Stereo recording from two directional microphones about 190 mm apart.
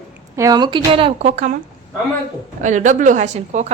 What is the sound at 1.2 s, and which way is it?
Speech, 40° right (ahead or behind).